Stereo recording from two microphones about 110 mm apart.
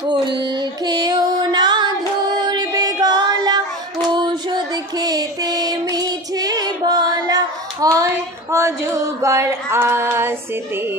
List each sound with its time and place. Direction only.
0.0 s music: 45° right (ahead or behind)
4.1 s child singing: 40° right (ahead or behind)
8.0 s a sound: 25° right (ahead or behind)